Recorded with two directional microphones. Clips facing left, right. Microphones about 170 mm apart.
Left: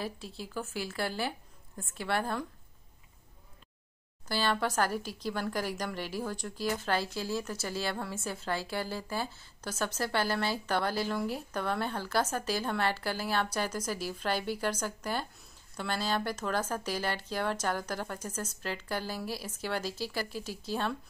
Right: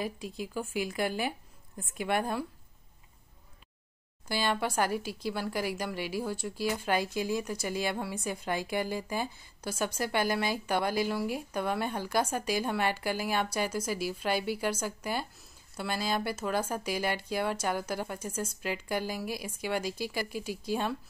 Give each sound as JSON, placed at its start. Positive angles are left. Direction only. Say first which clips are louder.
{"t": 0.4, "sound": "speech", "louder": "right 4 dB", "side_deg": -15}
{"t": 4.3, "sound": "speech", "louder": "even", "side_deg": -10}